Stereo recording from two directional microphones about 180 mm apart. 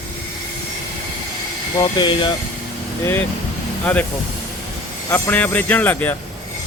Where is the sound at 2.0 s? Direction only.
25° left (ahead or behind).